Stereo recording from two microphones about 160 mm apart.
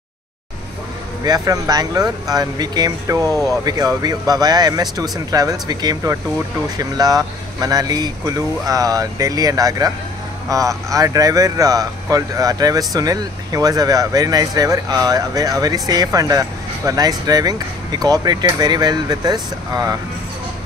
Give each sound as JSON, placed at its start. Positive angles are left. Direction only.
{"t": 1.2, "sound": "speech", "side_deg": -25}